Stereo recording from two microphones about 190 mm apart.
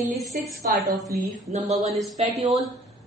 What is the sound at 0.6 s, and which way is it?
Speech, 50° right (ahead or behind).